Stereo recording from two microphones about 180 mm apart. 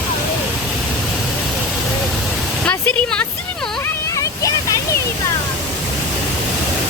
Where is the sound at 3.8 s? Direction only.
20° left (ahead or behind).